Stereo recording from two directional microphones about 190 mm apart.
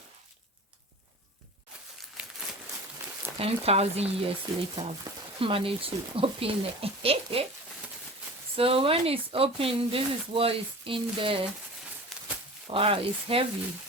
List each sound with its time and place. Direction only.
3.3 s speech: 30° right (ahead or behind)
8.5 s speech: 30° right (ahead or behind)
12.1 s livestock: centre (ahead or behind)
12.7 s speech: 30° right (ahead or behind)